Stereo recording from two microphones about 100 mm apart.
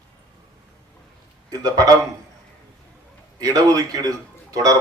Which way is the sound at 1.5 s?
35° right (ahead or behind).